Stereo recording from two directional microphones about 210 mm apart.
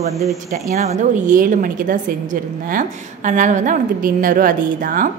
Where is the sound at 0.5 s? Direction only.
35° right (ahead or behind).